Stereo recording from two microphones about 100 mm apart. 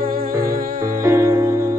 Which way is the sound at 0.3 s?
30° right (ahead or behind).